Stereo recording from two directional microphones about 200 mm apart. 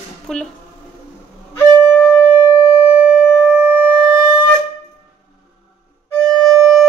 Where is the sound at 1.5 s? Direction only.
5° left (ahead or behind).